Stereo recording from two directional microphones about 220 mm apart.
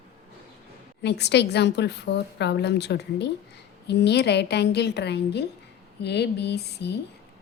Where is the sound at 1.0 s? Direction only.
50° left (ahead or behind).